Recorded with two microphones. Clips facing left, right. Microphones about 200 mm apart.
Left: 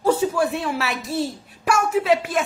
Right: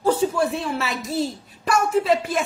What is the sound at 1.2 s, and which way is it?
A woman's voice, 5° left (ahead or behind).